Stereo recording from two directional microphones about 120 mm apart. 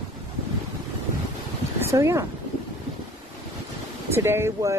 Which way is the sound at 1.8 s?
25° right (ahead or behind).